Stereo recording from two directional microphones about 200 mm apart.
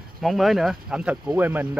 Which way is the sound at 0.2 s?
Centre (ahead or behind).